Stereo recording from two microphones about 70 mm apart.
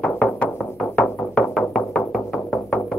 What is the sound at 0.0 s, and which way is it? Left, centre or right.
Music, centre.